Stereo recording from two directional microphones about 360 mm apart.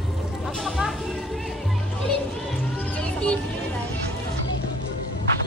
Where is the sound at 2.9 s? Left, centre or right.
Centre.